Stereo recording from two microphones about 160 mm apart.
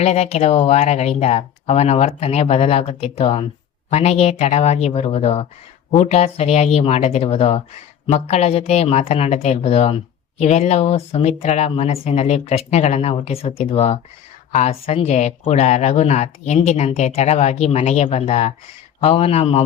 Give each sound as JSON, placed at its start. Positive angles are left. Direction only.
{"t": 0.0, "sound": "speech", "side_deg": 45}